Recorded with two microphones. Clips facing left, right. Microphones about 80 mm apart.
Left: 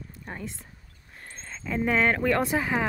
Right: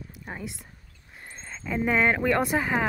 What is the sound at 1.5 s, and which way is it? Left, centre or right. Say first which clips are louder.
Speech: even; centre.